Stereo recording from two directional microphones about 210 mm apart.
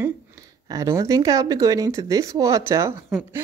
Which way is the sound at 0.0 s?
15° right (ahead or behind).